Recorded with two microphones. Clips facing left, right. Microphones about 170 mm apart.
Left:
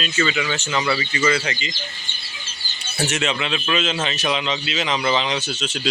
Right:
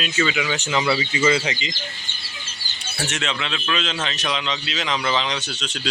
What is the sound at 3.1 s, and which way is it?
A man's voice, 10° left (ahead or behind).